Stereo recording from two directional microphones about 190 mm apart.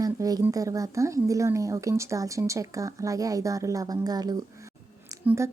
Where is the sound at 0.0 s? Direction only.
20° right (ahead or behind).